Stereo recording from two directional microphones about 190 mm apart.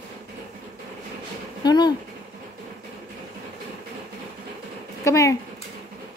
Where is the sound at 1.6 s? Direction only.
20° left (ahead or behind).